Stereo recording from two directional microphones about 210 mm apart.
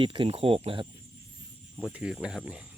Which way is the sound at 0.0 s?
25° right (ahead or behind).